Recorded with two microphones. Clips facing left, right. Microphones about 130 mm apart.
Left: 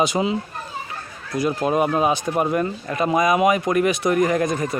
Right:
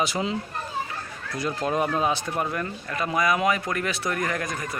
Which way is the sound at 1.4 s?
10° left (ahead or behind).